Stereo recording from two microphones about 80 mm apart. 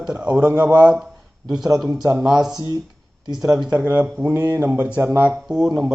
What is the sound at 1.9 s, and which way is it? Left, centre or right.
Speech, right.